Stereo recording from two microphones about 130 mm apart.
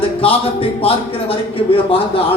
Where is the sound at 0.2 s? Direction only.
45° left (ahead or behind).